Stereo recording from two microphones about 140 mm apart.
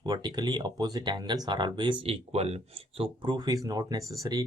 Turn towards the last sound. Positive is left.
turn(degrees=-25)  # may be behind; listen again after turning